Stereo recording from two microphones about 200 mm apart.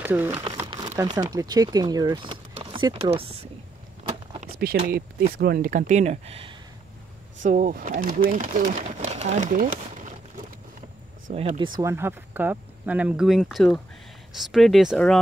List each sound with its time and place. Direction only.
0.0 s speech: 10° right (ahead or behind)
0.4 s speech: 20° right (ahead or behind)
4.7 s speech: 35° right (ahead or behind)
7.4 s speech: 40° right (ahead or behind)
11.5 s speech: 25° right (ahead or behind); by 15.1 s centre (ahead or behind)